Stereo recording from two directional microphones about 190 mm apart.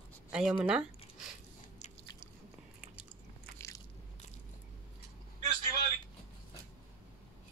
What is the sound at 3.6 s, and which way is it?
Biting, 15° left (ahead or behind).